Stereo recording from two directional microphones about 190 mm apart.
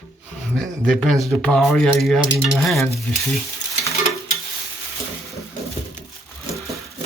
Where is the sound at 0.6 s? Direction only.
Centre (ahead or behind).